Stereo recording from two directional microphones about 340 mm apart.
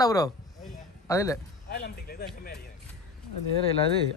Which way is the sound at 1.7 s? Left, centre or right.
Left.